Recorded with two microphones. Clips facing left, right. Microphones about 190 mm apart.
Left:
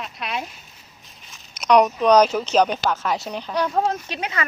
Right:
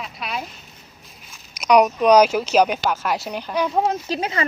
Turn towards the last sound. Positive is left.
turn(degrees=-30)  # may be behind; listen again after turning